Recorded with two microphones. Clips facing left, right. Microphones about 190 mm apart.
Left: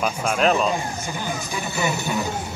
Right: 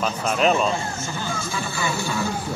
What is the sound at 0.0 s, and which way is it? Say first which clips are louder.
Speech: even; centre (ahead or behind).